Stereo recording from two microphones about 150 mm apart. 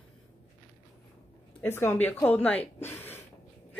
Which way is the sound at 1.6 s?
15° left (ahead or behind).